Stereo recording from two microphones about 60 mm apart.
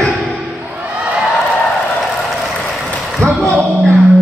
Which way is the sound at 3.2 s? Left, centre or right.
Right.